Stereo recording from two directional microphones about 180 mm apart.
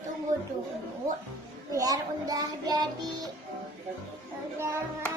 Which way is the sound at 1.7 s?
20° right (ahead or behind).